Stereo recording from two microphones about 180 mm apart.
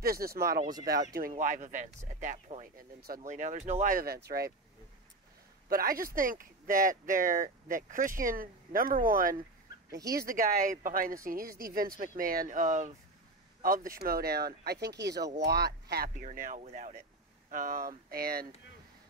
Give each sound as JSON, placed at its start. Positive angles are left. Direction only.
{"t": 0.0, "sound": "speech", "side_deg": -55}
{"t": 1.3, "sound": "speech", "side_deg": -40}
{"t": 5.7, "sound": "speech", "side_deg": -55}
{"t": 9.8, "sound": "speech", "side_deg": -20}
{"t": 10.2, "sound": "speech", "side_deg": -50}
{"t": 16.3, "sound": "speech", "side_deg": -50}